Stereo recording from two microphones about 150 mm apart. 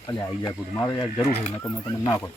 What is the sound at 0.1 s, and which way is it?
Speech, 25° left (ahead or behind).